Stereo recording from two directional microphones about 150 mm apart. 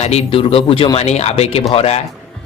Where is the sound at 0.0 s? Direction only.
40° left (ahead or behind).